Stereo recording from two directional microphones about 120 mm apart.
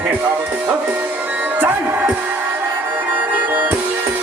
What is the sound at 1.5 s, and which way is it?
Speech, 15° right (ahead or behind).